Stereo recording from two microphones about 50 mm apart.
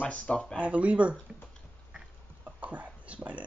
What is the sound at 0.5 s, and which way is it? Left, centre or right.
Speech, right.